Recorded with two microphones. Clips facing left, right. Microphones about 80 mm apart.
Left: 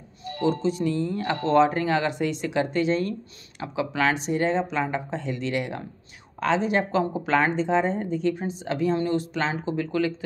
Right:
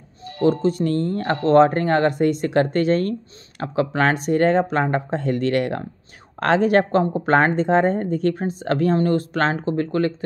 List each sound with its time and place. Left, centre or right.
0.4 s a woman's voice: right